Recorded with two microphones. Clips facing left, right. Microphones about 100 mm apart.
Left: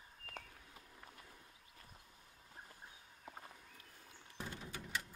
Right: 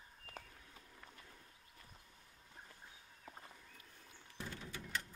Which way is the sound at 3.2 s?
10° left (ahead or behind).